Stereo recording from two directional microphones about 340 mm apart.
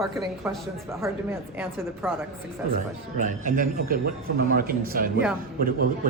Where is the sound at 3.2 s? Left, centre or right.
Right.